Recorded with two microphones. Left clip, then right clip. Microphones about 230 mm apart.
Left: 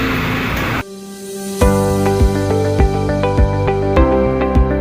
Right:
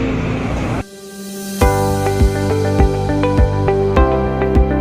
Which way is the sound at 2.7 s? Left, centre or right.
Centre.